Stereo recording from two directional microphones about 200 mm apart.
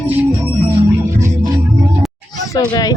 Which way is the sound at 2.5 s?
20° left (ahead or behind).